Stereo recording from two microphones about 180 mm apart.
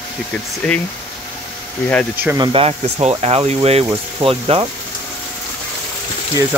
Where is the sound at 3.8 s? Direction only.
20° right (ahead or behind).